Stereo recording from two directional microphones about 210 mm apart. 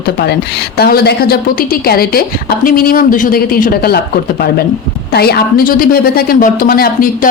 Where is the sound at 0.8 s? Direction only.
50° left (ahead or behind).